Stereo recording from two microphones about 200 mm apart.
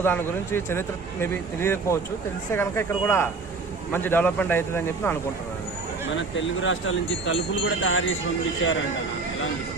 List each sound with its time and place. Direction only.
0.0 s speech: 10° left (ahead or behind)
6.3 s speech: 70° left (ahead or behind)